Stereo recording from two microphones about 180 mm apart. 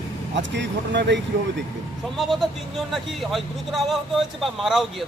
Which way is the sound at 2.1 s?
Centre (ahead or behind).